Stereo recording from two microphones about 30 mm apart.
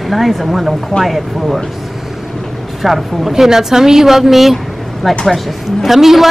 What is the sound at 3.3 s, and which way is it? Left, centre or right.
Speech, centre.